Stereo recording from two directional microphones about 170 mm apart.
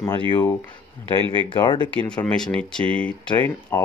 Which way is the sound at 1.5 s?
30° left (ahead or behind).